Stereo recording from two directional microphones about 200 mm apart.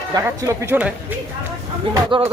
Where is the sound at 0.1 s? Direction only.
15° right (ahead or behind).